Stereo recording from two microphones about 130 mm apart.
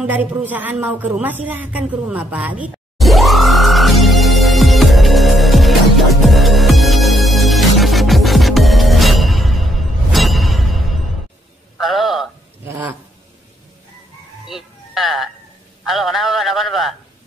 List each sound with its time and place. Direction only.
0.0 s a woman's voice: 10° right (ahead or behind)
3.0 s music: centre (ahead or behind)
11.8 s a sound: centre (ahead or behind)
12.6 s a sound: 20° right (ahead or behind)
14.5 s music: centre (ahead or behind)
15.8 s a man's voice: centre (ahead or behind)